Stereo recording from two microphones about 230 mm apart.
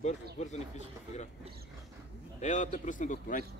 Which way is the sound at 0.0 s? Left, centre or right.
Left.